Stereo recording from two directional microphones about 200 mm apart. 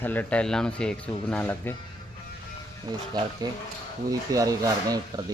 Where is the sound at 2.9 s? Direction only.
20° right (ahead or behind).